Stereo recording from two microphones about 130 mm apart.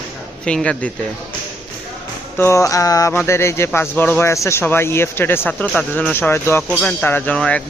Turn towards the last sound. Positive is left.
turn(degrees=10)  # may be behind; listen again after turning